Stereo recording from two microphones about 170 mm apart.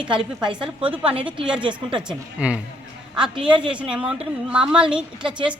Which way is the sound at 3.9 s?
5° right (ahead or behind).